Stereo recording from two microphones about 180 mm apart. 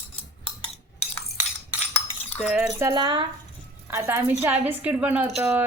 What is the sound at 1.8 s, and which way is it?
Cutlery, 35° left (ahead or behind).